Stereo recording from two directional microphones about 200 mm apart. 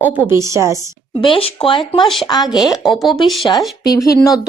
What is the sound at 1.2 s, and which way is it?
Speech, 25° left (ahead or behind).